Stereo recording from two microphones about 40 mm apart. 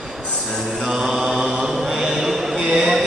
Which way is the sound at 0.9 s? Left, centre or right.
Centre.